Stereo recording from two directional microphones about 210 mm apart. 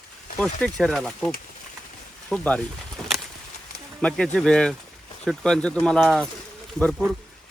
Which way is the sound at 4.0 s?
Centre (ahead or behind).